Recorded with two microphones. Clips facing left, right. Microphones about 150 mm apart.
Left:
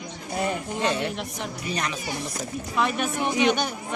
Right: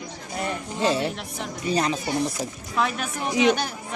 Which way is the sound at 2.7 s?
Centre (ahead or behind).